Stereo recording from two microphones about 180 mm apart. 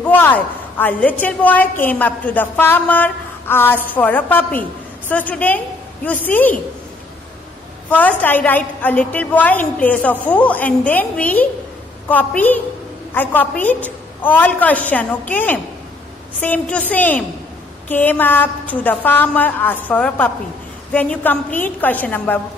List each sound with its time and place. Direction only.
0.0 s a woman's voice: 10° left (ahead or behind)
7.9 s a woman's voice: 10° left (ahead or behind)